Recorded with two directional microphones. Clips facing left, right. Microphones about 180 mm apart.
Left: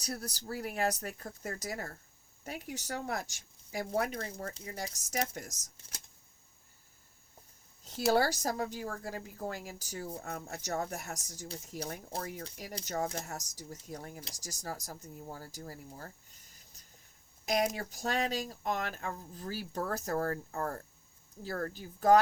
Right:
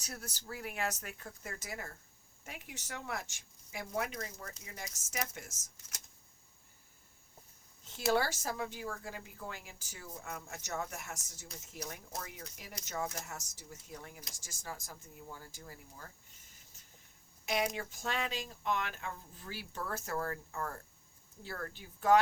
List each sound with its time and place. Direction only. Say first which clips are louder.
0.0 s speech: left 7 dB; 35° left (ahead or behind)
7.9 s speech: left 4 dB; 40° left (ahead or behind)